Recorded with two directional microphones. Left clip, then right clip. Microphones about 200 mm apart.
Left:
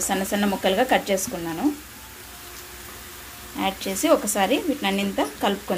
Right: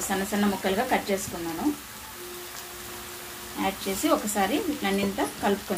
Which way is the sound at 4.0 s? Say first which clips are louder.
Left 5 dB; 45° left (ahead or behind).